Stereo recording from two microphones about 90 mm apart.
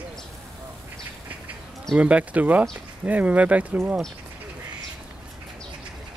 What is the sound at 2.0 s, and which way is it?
Speech, 15° right (ahead or behind).